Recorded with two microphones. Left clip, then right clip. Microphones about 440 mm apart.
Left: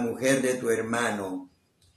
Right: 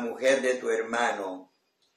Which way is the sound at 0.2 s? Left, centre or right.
Left.